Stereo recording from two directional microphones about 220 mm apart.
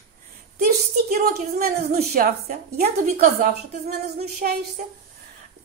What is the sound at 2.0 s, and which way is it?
A woman's voice, 40° right (ahead or behind).